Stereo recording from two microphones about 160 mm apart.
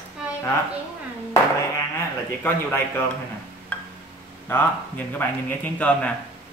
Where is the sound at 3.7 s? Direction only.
10° left (ahead or behind).